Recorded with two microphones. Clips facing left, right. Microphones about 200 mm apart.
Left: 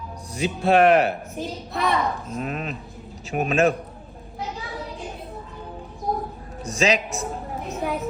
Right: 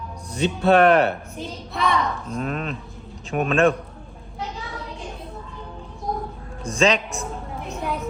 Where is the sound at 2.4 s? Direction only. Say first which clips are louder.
Right 2 dB; 40° right (ahead or behind).